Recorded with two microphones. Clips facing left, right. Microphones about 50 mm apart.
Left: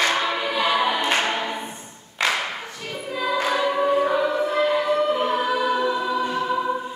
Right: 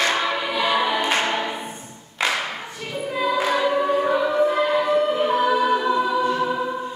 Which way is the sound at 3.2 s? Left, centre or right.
Centre.